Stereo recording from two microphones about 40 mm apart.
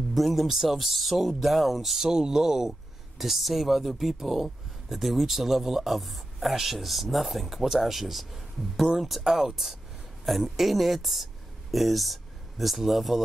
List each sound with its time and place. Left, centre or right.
0.1 s speech: centre
9.2 s speech: centre